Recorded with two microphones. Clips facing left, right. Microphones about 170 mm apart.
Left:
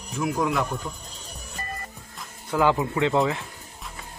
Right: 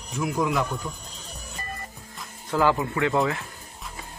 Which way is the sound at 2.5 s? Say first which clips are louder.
Left 1 dB; 15° left (ahead or behind).